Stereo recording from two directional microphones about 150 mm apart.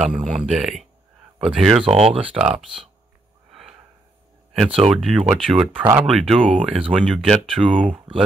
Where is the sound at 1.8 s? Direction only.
40° right (ahead or behind).